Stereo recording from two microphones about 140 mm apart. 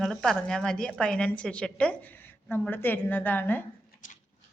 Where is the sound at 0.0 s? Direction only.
Centre (ahead or behind).